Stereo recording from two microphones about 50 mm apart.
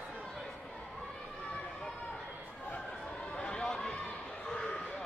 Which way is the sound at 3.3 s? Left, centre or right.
Centre.